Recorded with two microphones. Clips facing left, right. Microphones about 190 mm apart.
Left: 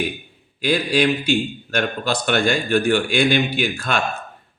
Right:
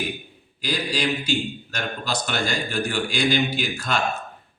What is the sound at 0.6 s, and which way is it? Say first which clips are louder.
A man's voice: left 7 dB; 55° left (ahead or behind).